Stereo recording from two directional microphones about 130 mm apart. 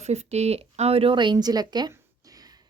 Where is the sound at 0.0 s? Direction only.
55° right (ahead or behind).